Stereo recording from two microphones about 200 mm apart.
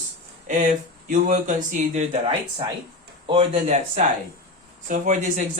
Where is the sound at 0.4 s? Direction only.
40° right (ahead or behind).